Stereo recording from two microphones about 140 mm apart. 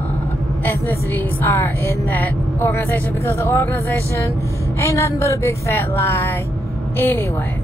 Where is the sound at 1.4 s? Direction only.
15° left (ahead or behind).